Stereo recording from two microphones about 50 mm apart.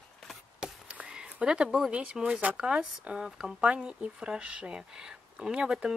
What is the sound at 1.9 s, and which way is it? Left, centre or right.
Speech, right.